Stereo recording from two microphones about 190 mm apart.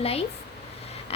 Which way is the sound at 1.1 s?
30° left (ahead or behind).